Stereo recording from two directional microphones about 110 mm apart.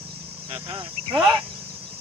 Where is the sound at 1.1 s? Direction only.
Centre (ahead or behind).